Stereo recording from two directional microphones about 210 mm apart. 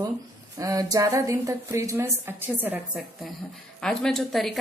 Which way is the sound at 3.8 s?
Centre (ahead or behind).